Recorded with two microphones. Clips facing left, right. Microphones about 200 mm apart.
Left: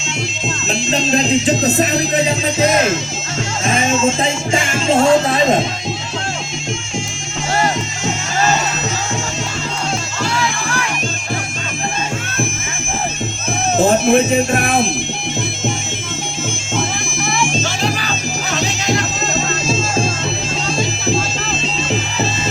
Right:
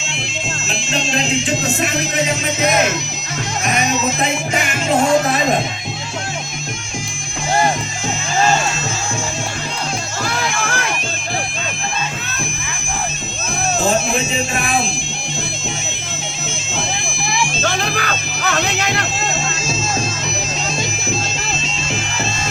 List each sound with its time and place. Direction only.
0.7 s music: 40° left (ahead or behind)
3.6 s speech: 25° left (ahead or behind)
13.7 s speech: 55° left (ahead or behind)
17.7 s music: 55° right (ahead or behind)